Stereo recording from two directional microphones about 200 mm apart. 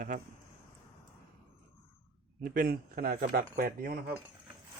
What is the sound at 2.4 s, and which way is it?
Speech, 45° right (ahead or behind).